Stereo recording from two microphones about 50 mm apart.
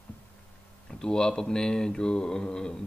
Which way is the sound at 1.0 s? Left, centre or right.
Centre.